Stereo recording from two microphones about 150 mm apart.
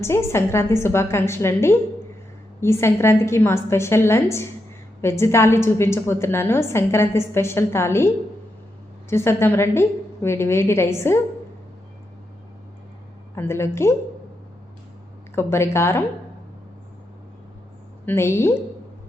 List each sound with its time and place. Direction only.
0.0 s a woman's voice: 20° left (ahead or behind)
13.3 s a woman's voice: 15° left (ahead or behind)
15.4 s a woman's voice: 15° left (ahead or behind)
18.0 s a woman's voice: 15° left (ahead or behind)